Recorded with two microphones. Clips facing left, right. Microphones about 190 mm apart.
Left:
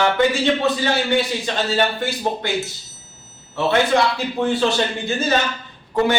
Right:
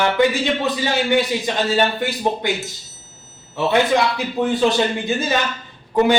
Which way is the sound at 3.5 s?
15° right (ahead or behind).